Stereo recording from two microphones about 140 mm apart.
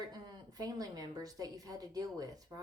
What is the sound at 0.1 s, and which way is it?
Speech, 30° right (ahead or behind).